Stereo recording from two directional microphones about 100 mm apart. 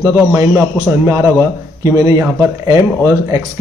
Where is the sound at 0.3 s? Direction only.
25° right (ahead or behind).